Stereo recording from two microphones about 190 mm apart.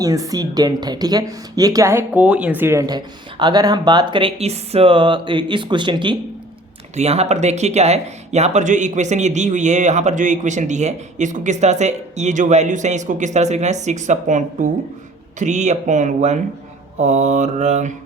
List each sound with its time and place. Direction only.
0.0 s speech: 20° right (ahead or behind); by 17.9 s 40° right (ahead or behind)